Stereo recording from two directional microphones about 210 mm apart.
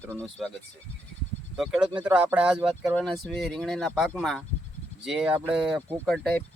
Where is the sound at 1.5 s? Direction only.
Centre (ahead or behind).